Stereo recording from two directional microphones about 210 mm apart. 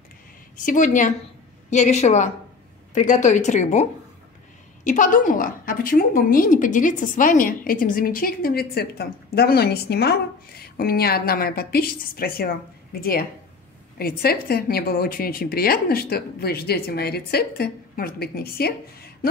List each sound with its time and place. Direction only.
0.6 s a woman's voice: 40° left (ahead or behind)
4.8 s a woman's voice: 40° left (ahead or behind)